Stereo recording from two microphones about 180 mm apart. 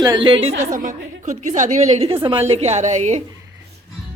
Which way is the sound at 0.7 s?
45° right (ahead or behind).